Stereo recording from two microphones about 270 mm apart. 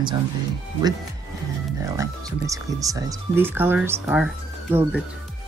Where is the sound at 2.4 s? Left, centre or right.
Centre.